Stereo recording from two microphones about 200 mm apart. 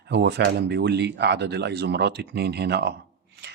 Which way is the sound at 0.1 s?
60° right (ahead or behind).